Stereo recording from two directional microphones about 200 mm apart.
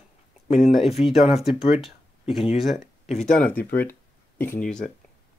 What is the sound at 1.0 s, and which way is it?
Speech, 30° left (ahead or behind).